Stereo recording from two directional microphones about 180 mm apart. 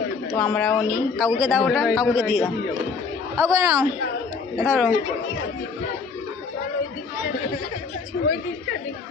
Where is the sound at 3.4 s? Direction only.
15° right (ahead or behind).